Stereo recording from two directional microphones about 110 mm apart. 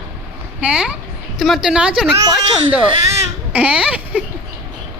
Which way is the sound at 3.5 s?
10° right (ahead or behind).